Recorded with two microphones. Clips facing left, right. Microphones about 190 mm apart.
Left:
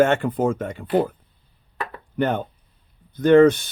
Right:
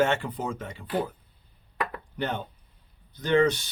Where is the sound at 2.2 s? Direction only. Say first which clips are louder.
Left 9 dB; 50° left (ahead or behind).